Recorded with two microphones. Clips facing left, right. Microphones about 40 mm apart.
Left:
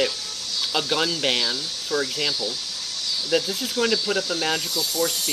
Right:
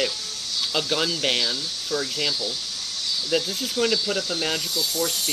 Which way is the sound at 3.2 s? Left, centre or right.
Centre.